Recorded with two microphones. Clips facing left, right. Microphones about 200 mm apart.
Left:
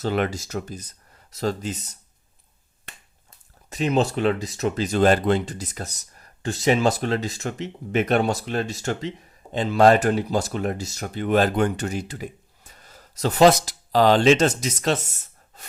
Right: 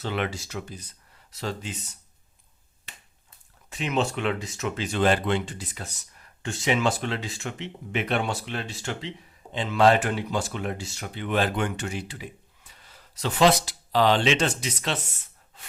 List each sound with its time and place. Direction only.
0.0 s speech: 40° left (ahead or behind)
2.9 s finger snapping: 50° left (ahead or behind)
3.7 s speech: 40° left (ahead or behind)